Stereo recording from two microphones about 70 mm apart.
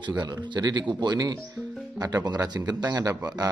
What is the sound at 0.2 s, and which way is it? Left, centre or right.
Speech, right.